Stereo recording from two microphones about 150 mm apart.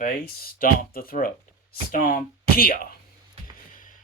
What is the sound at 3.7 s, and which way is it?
Music, 65° left (ahead or behind).